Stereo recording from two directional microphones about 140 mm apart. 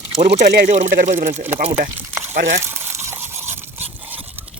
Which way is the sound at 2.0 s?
15° right (ahead or behind).